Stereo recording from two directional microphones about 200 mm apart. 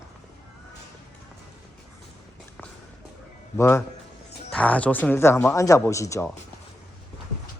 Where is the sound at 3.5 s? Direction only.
10° left (ahead or behind).